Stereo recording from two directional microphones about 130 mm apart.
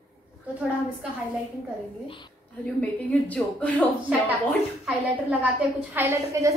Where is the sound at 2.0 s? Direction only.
40° left (ahead or behind).